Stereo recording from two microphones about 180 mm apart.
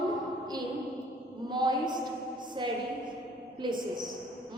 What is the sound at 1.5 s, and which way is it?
Speech, 25° right (ahead or behind).